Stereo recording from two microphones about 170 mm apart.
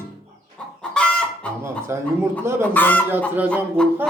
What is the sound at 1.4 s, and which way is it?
Speech, 5° left (ahead or behind).